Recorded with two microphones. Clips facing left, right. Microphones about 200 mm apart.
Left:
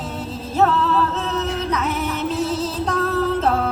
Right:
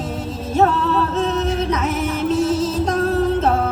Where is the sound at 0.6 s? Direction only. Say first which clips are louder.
Right 1 dB; 30° right (ahead or behind).